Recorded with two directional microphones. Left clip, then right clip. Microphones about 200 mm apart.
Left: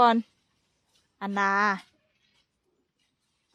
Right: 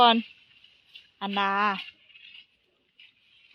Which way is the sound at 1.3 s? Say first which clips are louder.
Left 1 dB; 15° left (ahead or behind).